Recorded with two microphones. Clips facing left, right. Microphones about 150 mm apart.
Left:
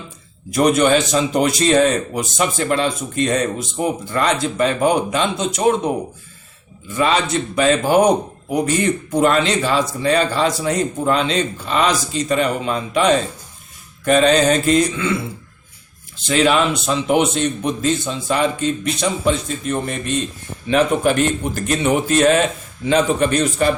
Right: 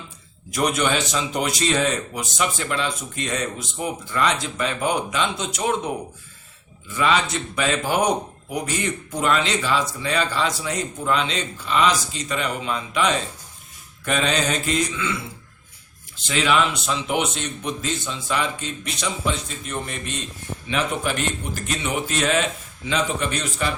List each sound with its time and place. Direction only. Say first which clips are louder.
0.5 s speech: left 8 dB; 45° left (ahead or behind)
6.9 s speech: left 4 dB; 40° left (ahead or behind)
16.2 s a man's voice: left 5 dB; 40° left (ahead or behind)